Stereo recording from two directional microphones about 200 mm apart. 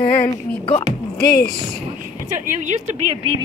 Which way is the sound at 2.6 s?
35° right (ahead or behind).